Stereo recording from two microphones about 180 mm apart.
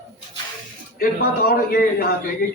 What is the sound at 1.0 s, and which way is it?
Speech, 55° left (ahead or behind).